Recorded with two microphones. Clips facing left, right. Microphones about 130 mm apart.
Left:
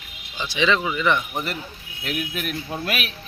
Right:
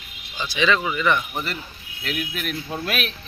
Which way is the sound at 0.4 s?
20° left (ahead or behind).